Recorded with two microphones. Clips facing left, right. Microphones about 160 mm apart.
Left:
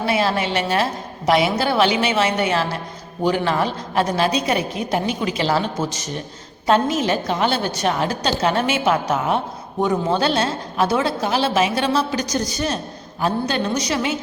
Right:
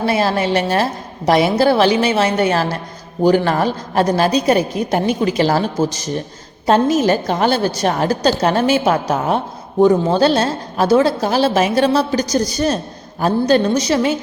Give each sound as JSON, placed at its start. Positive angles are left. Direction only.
{"t": 0.0, "sound": "a woman's voice", "side_deg": -40}
{"t": 6.7, "sound": "a woman's voice", "side_deg": -40}